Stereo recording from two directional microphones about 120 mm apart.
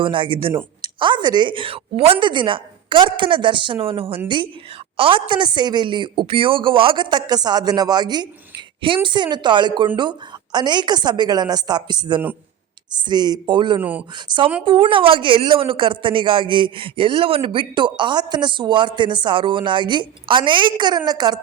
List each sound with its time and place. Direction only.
0.0 s a woman's voice: 45° right (ahead or behind)
5.3 s a woman's voice: 40° right (ahead or behind)
13.7 s speech: 15° right (ahead or behind)
14.6 s a woman's voice: 45° right (ahead or behind)